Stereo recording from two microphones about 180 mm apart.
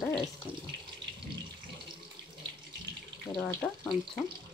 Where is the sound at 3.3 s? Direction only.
20° left (ahead or behind).